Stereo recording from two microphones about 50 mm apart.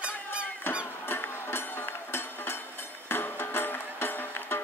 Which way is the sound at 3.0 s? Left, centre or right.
Left.